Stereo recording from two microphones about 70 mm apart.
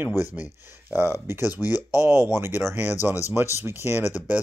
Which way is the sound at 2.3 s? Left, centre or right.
Right.